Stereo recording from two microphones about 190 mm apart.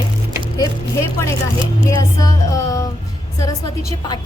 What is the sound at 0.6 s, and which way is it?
Speech, 15° left (ahead or behind).